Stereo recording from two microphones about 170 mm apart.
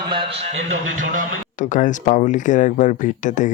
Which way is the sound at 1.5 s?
50° left (ahead or behind).